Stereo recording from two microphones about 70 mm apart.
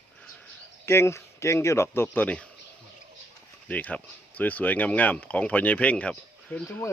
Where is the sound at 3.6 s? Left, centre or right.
Left.